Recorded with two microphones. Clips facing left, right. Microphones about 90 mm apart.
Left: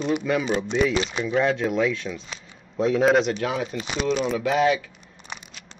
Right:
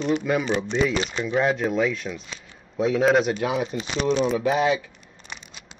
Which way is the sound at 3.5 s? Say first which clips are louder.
Right 1 dB; 25° right (ahead or behind).